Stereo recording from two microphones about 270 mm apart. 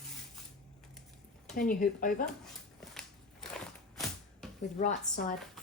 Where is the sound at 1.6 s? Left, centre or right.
Left.